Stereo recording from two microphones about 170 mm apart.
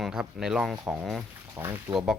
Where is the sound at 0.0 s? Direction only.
5° right (ahead or behind).